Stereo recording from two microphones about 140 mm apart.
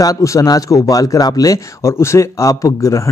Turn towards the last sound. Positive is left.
turn(degrees=20)  # may be behind; listen again after turning